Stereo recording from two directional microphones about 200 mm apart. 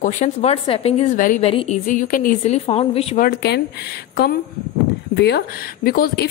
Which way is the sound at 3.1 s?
50° left (ahead or behind).